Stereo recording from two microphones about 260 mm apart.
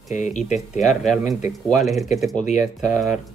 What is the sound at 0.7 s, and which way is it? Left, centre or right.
Speech, centre.